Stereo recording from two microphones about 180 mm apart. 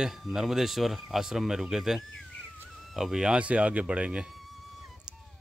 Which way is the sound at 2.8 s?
Centre (ahead or behind).